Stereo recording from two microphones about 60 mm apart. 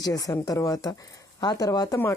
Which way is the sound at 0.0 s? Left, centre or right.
Left.